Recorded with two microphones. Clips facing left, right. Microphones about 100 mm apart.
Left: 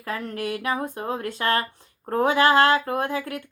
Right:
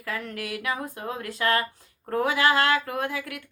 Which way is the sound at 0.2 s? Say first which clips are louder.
Left 5 dB; 25° left (ahead or behind).